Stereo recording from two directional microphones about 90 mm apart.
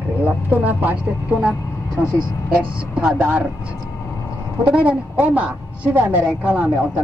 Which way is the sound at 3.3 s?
20° right (ahead or behind).